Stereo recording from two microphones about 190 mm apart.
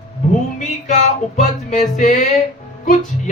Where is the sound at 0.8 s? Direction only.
40° left (ahead or behind).